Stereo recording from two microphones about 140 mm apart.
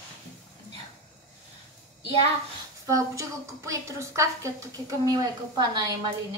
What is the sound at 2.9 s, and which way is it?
A woman's voice, 20° right (ahead or behind).